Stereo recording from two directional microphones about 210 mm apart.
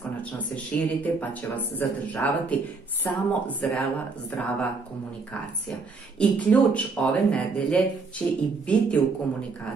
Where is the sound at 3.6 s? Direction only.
5° left (ahead or behind).